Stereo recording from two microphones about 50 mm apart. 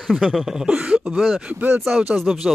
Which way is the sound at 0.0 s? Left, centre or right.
Centre.